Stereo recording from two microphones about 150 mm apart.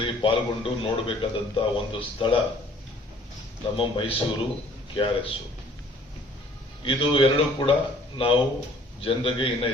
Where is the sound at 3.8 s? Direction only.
35° left (ahead or behind).